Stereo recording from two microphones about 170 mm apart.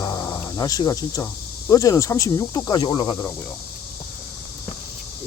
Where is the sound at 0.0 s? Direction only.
20° left (ahead or behind).